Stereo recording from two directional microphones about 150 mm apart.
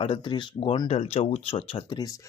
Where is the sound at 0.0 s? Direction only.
35° left (ahead or behind).